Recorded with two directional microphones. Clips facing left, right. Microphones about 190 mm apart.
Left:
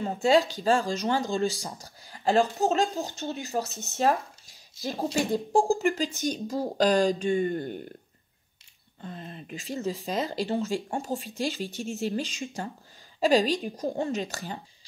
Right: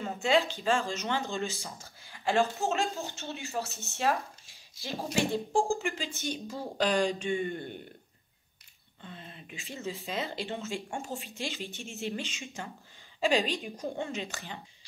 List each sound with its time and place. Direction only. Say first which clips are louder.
0.0 s speech: left 5 dB; 35° left (ahead or behind)
3.6 s speech: left 4 dB; 20° left (ahead or behind)
3.9 s speech: left 5 dB; 40° left (ahead or behind)
9.0 s speech: left 7 dB; 40° left (ahead or behind)